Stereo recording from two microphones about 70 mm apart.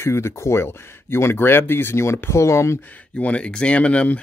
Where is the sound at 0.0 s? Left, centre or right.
Left.